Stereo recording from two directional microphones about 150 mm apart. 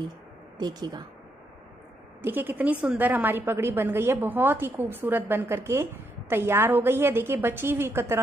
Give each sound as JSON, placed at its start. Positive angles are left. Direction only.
{"t": 0.6, "sound": "speech", "side_deg": -25}
{"t": 2.2, "sound": "a woman's voice", "side_deg": -15}